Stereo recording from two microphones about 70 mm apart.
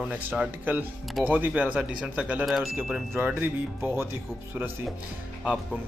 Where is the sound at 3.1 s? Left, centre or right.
Right.